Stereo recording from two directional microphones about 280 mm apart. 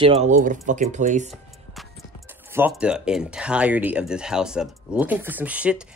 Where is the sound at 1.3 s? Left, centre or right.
Centre.